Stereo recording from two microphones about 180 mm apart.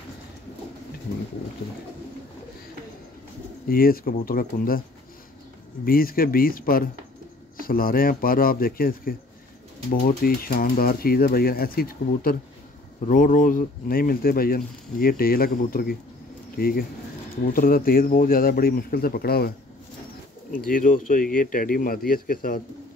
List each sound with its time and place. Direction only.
3.6 s speech: 55° left (ahead or behind)
5.9 s speech: 55° left (ahead or behind)
20.5 s speech: 50° left (ahead or behind)